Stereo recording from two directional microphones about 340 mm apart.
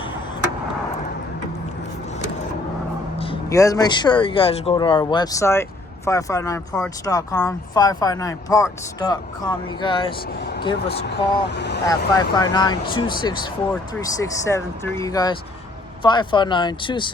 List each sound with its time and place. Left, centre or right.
3.2 s speech: centre
10.8 s speech: left
11.9 s speech: centre